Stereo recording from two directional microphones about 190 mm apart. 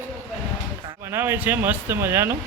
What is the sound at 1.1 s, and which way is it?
Speech, 10° right (ahead or behind).